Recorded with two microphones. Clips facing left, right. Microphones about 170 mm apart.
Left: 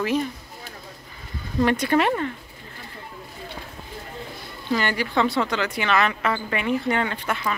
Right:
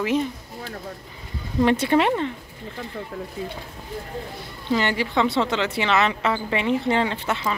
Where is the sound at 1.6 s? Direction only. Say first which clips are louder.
Right 2 dB; 25° right (ahead or behind).